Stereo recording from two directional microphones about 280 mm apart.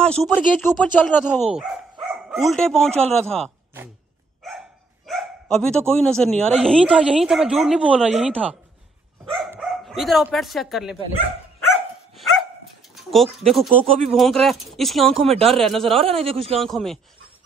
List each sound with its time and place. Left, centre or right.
0.0 s speech: centre
1.5 s bow-wow: centre
3.1 s speech: centre
9.2 s bow-wow: centre
12.9 s a sound: centre
13.5 s speech: centre
16.0 s a man's voice: centre
16.5 s speech: centre